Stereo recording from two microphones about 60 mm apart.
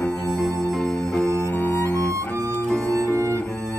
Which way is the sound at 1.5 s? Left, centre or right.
Left.